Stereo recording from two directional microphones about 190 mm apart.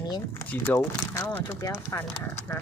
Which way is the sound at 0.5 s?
10° left (ahead or behind).